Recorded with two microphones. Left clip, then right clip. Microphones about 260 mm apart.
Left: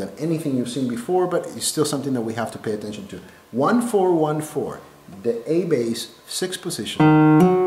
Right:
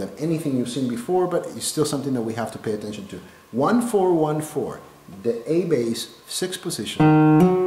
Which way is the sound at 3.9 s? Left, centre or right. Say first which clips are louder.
Left 1 dB; left.